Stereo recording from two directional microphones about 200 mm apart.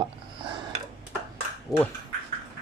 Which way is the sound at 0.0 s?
25° right (ahead or behind).